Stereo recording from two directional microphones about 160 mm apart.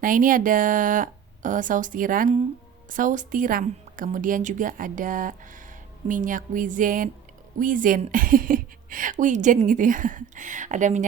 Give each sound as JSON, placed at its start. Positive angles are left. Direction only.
{"t": 0.0, "sound": "a woman's voice", "side_deg": -60}